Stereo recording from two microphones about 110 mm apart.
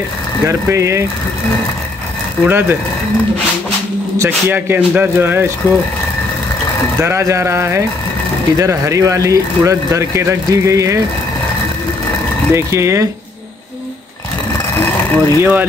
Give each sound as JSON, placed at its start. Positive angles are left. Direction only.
{"t": 0.5, "sound": "speech", "side_deg": -25}
{"t": 2.4, "sound": "speech", "side_deg": -20}
{"t": 4.2, "sound": "speech", "side_deg": -20}
{"t": 7.0, "sound": "speech", "side_deg": -25}
{"t": 12.5, "sound": "speech", "side_deg": -25}
{"t": 14.8, "sound": "a sound", "side_deg": 20}
{"t": 15.1, "sound": "speech", "side_deg": -20}